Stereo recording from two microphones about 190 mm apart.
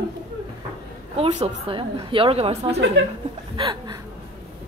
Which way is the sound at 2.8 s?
70° right (ahead or behind).